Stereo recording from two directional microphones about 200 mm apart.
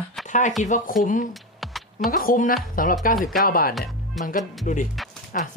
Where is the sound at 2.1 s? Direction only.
45° left (ahead or behind).